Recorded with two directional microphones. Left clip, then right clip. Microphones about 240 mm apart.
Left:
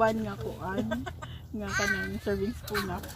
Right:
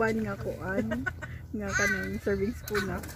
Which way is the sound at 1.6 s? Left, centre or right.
Left.